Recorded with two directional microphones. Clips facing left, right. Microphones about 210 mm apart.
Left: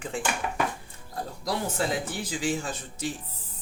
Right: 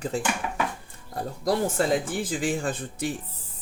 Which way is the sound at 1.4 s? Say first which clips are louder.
Right 5 dB; 50° right (ahead or behind).